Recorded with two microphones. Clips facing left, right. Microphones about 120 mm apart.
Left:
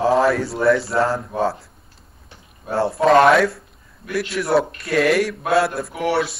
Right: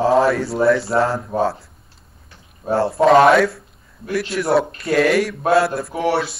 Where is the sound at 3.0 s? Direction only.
Centre (ahead or behind).